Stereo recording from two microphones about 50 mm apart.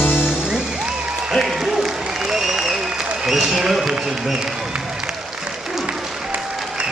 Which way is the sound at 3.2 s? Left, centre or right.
Centre.